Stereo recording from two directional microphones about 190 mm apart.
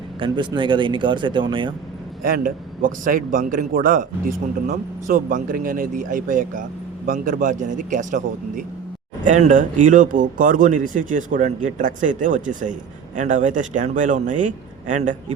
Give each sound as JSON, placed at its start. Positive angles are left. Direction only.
{"t": 0.2, "sound": "speech", "side_deg": -25}
{"t": 2.2, "sound": "a man's voice", "side_deg": -45}